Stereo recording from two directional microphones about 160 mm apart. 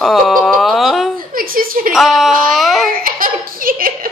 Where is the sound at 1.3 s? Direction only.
65° right (ahead or behind).